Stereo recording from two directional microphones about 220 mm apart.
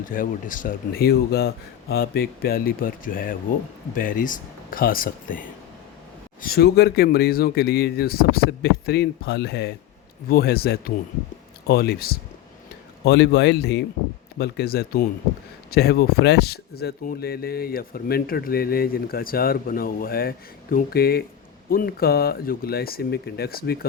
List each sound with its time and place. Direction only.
0.0 s speech: 40° left (ahead or behind)
6.4 s speech: 45° left (ahead or behind)